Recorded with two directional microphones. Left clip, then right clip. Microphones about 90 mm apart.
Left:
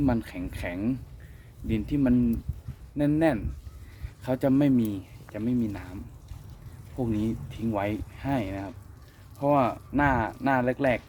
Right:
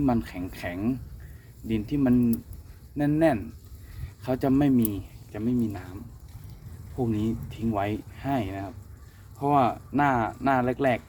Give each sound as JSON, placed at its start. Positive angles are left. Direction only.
{"t": 0.0, "sound": "speech", "side_deg": 30}
{"t": 6.9, "sound": "speech", "side_deg": 30}
{"t": 9.4, "sound": "speech", "side_deg": 20}